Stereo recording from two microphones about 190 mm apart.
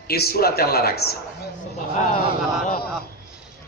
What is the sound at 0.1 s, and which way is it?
Speech, 55° left (ahead or behind).